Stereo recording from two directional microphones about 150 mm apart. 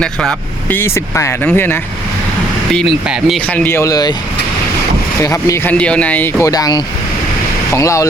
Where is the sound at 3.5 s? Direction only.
15° left (ahead or behind).